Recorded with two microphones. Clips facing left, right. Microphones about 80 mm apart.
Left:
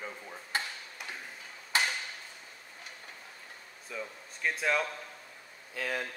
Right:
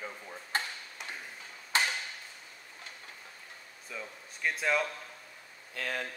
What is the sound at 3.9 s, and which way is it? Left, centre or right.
A man's voice, centre.